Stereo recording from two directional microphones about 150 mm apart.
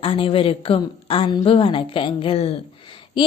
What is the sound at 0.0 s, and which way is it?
A woman's voice, 35° left (ahead or behind).